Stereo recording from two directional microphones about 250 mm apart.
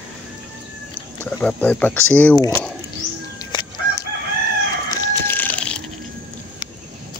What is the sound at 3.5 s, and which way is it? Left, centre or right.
Crowing, centre.